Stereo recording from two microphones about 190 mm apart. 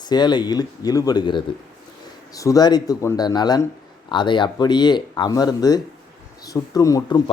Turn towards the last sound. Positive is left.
turn(degrees=20)  # may be behind; listen again after turning